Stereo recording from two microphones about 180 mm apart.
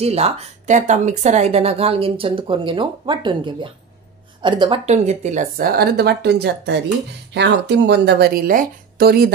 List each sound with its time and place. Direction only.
0.0 s speech: 35° right (ahead or behind)
4.8 s speech: 40° right (ahead or behind); by 9.3 s 60° right (ahead or behind)